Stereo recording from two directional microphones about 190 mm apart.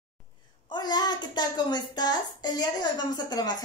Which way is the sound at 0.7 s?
20° left (ahead or behind).